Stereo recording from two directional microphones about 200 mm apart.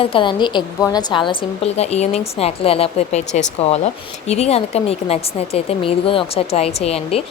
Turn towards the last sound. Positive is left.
turn(degrees=30)  # may be behind; listen again after turning